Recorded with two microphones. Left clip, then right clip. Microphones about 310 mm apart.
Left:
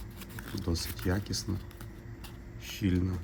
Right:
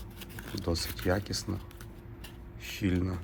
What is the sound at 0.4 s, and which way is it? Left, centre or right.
Speech, centre.